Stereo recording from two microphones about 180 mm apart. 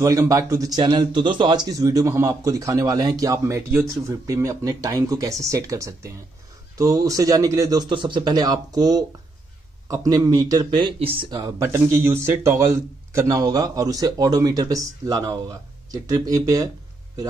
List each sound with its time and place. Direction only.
0.0 s a man's voice: 20° right (ahead or behind)